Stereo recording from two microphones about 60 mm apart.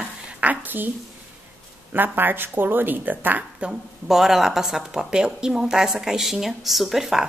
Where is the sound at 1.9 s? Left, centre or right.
Right.